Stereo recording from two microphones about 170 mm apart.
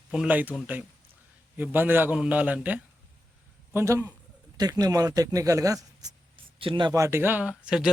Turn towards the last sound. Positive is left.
turn(degrees=-5)  # may be behind; listen again after turning